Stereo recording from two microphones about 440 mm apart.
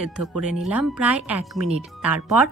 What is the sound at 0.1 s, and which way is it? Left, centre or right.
Speech, centre.